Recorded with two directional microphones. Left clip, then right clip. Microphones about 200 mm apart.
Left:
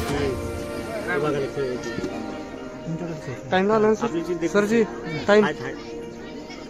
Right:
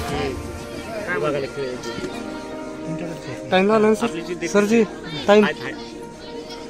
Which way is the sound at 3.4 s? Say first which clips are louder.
Right 3 dB; 55° right (ahead or behind).